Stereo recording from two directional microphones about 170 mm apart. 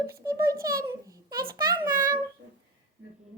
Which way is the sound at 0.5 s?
60° right (ahead or behind).